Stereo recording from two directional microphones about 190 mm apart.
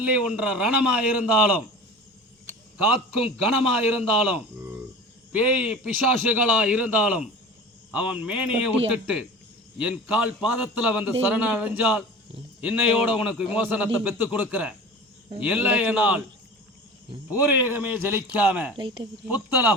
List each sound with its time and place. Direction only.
0.0 s a man's voice: 5° right (ahead or behind)
2.9 s a man's voice: 5° right (ahead or behind)
5.3 s a man's voice: 5° right (ahead or behind)
17.2 s a man's voice: 10° right (ahead or behind)
18.8 s speech: 25° right (ahead or behind)
19.3 s a man's voice: 10° right (ahead or behind)